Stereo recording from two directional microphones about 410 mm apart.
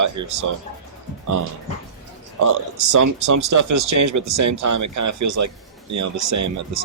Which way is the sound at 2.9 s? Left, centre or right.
Right.